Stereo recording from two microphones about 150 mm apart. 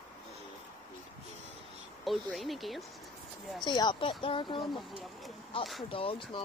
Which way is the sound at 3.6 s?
30° left (ahead or behind).